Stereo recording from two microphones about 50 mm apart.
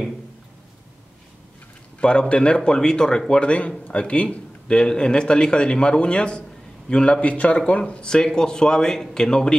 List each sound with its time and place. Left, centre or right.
2.0 s a man's voice: centre
8.1 s a man's voice: centre